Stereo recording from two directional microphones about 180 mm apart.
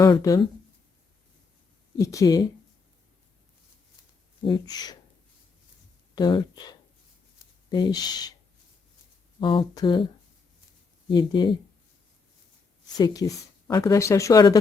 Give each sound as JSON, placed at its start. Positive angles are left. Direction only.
{"t": 0.0, "sound": "speech", "side_deg": 20}
{"t": 2.0, "sound": "speech", "side_deg": 20}
{"t": 4.4, "sound": "speech", "side_deg": 25}
{"t": 6.1, "sound": "speech", "side_deg": 25}
{"t": 9.4, "sound": "speech", "side_deg": 25}
{"t": 11.1, "sound": "speech", "side_deg": 25}
{"t": 13.0, "sound": "speech", "side_deg": 20}